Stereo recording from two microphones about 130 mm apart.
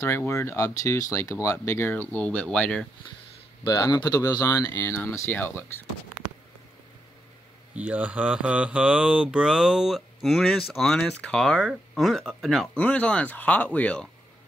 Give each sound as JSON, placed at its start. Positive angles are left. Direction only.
{"t": 0.0, "sound": "speech", "side_deg": 20}
{"t": 3.6, "sound": "speech", "side_deg": 30}
{"t": 4.7, "sound": "speech", "side_deg": 15}
{"t": 7.7, "sound": "speech", "side_deg": -10}